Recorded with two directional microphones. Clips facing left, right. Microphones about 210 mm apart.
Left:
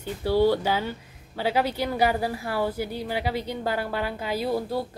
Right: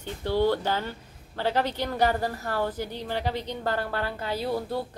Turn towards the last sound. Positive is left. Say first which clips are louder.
# left 2 dB
turn(degrees=10)  # may be behind; listen again after turning